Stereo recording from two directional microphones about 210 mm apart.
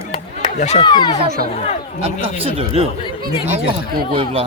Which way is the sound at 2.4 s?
25° right (ahead or behind).